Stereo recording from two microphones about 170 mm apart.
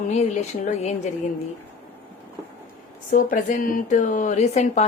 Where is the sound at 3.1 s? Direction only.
55° left (ahead or behind).